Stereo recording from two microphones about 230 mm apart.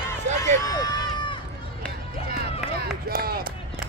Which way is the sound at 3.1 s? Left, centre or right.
Right.